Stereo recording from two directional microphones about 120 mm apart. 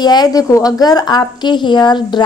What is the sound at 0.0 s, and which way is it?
A woman's voice, 35° left (ahead or behind).